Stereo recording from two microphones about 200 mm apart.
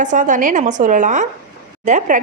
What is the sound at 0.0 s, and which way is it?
A woman's voice, 40° right (ahead or behind).